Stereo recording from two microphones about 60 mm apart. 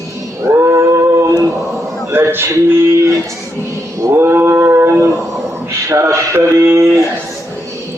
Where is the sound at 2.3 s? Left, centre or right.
Right.